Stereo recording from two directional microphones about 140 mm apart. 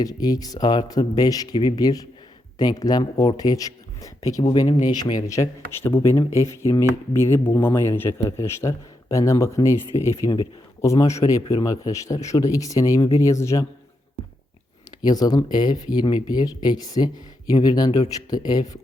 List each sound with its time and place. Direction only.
0.0 s speech: 25° left (ahead or behind)
15.0 s speech: 25° left (ahead or behind)